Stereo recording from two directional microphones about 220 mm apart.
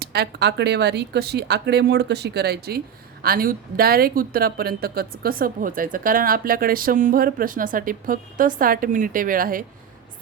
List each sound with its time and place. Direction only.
0.0 s speech: 45° right (ahead or behind)